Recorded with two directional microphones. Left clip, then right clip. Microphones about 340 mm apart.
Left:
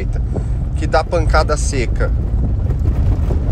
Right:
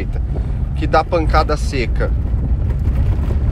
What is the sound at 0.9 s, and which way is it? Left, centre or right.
Speech, centre.